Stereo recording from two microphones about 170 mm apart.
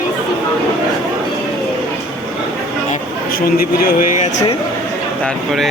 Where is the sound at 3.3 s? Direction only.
60° left (ahead or behind).